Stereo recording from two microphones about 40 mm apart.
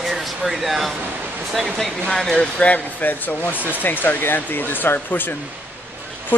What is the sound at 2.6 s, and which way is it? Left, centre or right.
Speech, left.